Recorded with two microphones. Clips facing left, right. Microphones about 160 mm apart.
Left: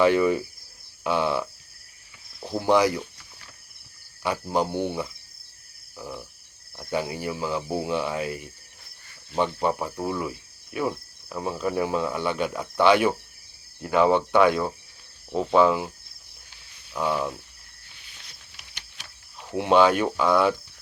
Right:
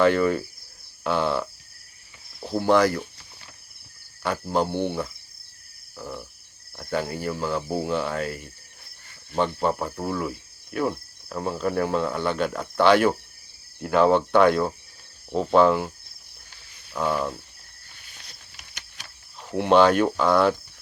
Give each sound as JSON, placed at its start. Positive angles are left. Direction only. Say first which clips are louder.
{"t": 0.0, "sound": "cricket", "louder": "even", "side_deg": 10}
{"t": 2.6, "sound": "cricket", "louder": "right 1 dB", "side_deg": 10}
{"t": 4.2, "sound": "cricket", "louder": "right 1 dB", "side_deg": 10}
{"t": 13.8, "sound": "speech", "louder": "right 1 dB", "side_deg": 5}
{"t": 16.9, "sound": "speech", "louder": "right 1 dB", "side_deg": 5}
{"t": 18.0, "sound": "a sound", "louder": "right 2 dB", "side_deg": -45}
{"t": 19.5, "sound": "cricket", "louder": "right 2 dB", "side_deg": 10}